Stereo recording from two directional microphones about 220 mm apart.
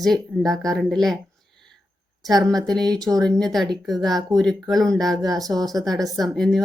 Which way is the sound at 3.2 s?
5° left (ahead or behind).